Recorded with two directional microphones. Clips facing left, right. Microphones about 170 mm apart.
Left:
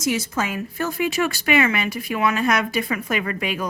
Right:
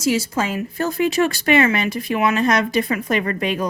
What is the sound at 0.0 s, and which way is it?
Speech, 30° right (ahead or behind).